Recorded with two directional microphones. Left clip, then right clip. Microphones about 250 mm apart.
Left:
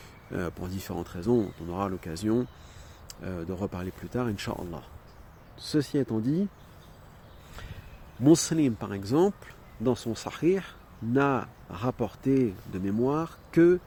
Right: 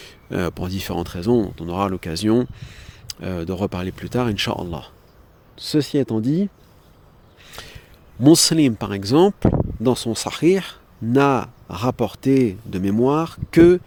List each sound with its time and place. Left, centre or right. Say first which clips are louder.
0.0 s speech: right 9 dB; right
7.6 s a sound: right 9 dB; right
8.2 s speech: right 8 dB; right